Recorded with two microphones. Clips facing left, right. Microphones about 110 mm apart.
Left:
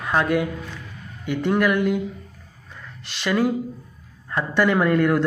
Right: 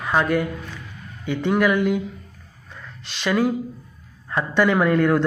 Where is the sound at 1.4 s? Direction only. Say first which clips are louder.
Right 1 dB; 15° right (ahead or behind).